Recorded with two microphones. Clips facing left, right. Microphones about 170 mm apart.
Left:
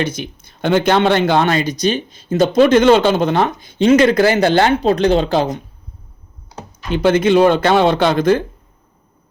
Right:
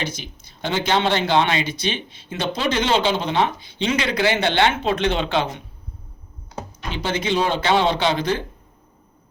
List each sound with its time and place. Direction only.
0.0 s speech: 55° left (ahead or behind)
6.9 s speech: 55° left (ahead or behind)